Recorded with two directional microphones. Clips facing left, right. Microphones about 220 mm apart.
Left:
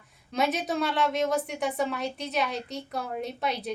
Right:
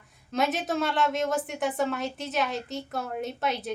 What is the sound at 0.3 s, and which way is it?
A woman's voice, centre (ahead or behind).